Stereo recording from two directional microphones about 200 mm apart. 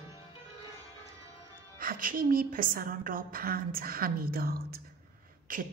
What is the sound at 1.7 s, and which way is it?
Speech, 45° right (ahead or behind).